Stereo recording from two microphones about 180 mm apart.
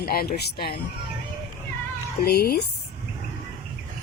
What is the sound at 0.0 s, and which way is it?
Speech, 60° left (ahead or behind).